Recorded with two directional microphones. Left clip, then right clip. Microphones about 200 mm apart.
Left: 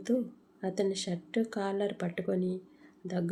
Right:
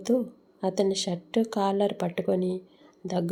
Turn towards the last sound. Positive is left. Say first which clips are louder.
# right 6 dB
turn(degrees=-15)  # may be behind; listen again after turning